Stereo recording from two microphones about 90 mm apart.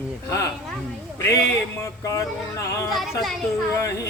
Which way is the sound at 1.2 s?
30° left (ahead or behind).